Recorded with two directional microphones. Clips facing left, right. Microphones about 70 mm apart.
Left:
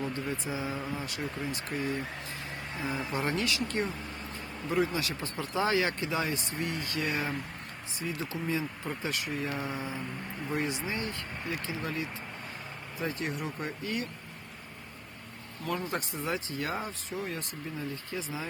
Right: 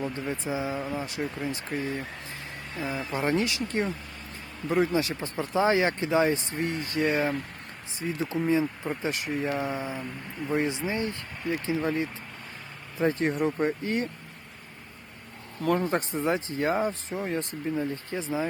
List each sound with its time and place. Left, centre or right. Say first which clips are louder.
0.3 s speech: right 4 dB; right
0.8 s speech: right 4 dB; centre
1.0 s speech: right 4 dB; right
3.1 s speech: right 6 dB; right
15.8 s speech: right 7 dB; right